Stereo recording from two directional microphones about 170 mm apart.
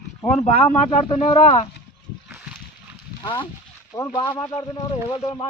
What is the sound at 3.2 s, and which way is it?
Speech, 30° left (ahead or behind).